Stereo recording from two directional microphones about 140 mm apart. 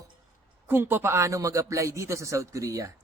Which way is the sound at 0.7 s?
15° right (ahead or behind).